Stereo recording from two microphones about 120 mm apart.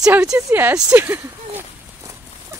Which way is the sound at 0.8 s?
15° right (ahead or behind).